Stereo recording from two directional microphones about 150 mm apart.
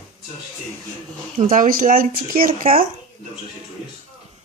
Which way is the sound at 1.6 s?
65° right (ahead or behind).